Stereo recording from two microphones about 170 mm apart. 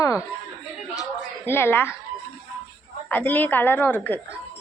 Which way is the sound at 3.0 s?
10° left (ahead or behind).